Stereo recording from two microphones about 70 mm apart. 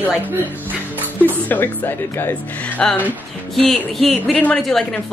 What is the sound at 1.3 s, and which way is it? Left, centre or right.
Speech, left.